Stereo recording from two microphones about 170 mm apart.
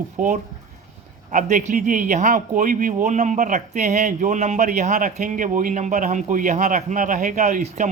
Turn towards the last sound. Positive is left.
turn(degrees=-45)  # may be behind; listen again after turning